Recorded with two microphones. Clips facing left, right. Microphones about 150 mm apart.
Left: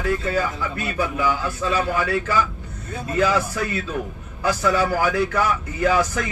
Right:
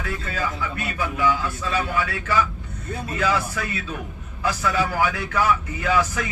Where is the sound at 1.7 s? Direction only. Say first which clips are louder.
Left 4 dB; 40° left (ahead or behind).